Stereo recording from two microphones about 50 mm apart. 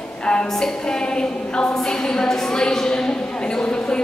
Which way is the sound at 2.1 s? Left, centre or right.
Centre.